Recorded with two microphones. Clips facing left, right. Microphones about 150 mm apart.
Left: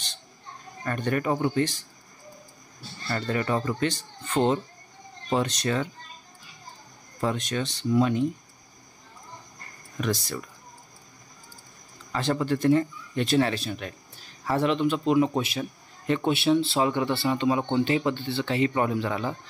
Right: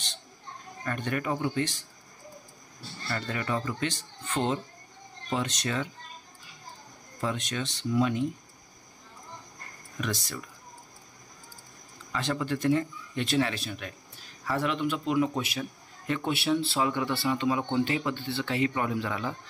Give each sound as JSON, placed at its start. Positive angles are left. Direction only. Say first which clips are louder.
{"t": 0.8, "sound": "speech", "louder": "left 4 dB", "side_deg": 40}
{"t": 3.1, "sound": "speech", "louder": "left 5 dB", "side_deg": 40}
{"t": 7.2, "sound": "speech", "louder": "left 4 dB", "side_deg": 40}
{"t": 9.9, "sound": "speech", "louder": "left 5 dB", "side_deg": 45}
{"t": 12.1, "sound": "speech", "louder": "left 4 dB", "side_deg": 35}